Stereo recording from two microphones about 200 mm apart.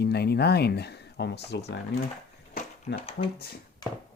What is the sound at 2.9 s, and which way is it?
Speech, 30° left (ahead or behind).